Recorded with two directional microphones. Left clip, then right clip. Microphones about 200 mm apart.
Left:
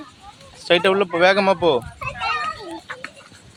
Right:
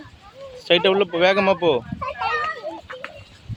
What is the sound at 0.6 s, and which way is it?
Speech, 10° right (ahead or behind).